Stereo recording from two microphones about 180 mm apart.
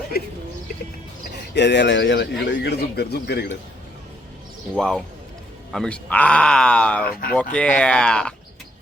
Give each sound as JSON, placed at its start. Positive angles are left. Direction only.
{"t": 1.5, "sound": "a man's voice", "side_deg": 75}
{"t": 4.7, "sound": "speech", "side_deg": 5}
{"t": 7.1, "sound": "speech", "side_deg": 55}
{"t": 7.5, "sound": "speech", "side_deg": 5}